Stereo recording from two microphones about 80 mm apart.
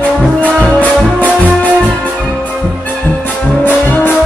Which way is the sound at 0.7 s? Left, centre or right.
Centre.